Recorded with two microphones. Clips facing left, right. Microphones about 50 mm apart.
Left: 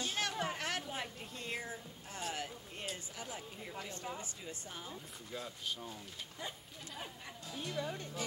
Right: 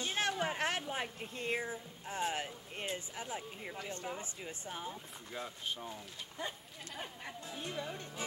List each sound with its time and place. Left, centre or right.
0.0 s a woman's voice: right